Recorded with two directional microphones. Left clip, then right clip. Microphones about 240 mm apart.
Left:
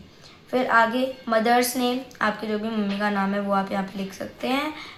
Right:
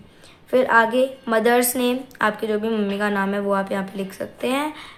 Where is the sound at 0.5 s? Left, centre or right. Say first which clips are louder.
Right 4 dB; right.